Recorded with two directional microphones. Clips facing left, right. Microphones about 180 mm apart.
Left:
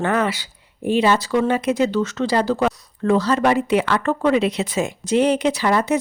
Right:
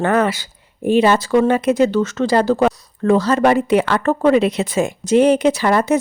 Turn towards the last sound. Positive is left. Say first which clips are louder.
# right 3 dB
turn(degrees=-50)  # may be behind; listen again after turning